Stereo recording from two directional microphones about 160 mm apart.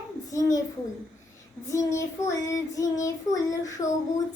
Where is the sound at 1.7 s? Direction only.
15° left (ahead or behind).